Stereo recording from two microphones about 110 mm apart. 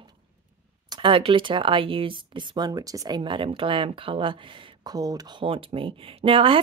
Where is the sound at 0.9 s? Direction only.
50° right (ahead or behind).